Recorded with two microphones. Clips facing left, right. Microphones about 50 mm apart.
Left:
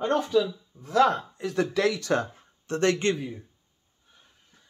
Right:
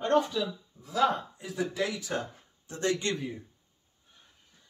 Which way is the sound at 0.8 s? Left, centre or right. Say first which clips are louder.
Left 5 dB; left.